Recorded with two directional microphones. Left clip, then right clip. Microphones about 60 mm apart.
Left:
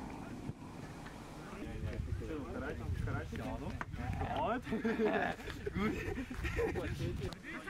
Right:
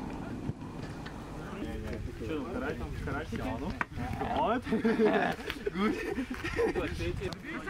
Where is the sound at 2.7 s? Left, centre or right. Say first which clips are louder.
Right 7 dB; right.